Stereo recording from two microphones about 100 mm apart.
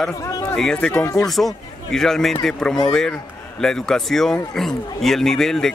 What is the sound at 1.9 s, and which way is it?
A man's voice, 5° left (ahead or behind).